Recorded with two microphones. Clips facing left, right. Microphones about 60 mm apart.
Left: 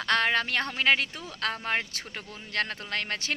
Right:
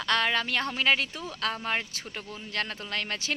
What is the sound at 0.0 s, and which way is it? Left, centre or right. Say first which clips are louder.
Speech: left 1 dB; left.